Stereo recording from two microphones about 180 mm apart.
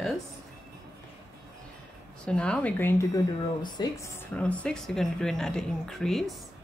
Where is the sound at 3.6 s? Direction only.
25° left (ahead or behind).